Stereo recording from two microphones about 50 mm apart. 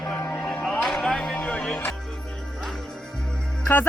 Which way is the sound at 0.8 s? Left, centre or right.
Centre.